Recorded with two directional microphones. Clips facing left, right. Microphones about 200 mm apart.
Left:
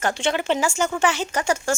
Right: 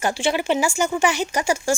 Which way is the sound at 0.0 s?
10° right (ahead or behind).